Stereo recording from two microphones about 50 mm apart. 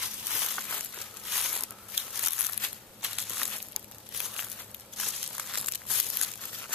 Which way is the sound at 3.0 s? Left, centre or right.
Centre.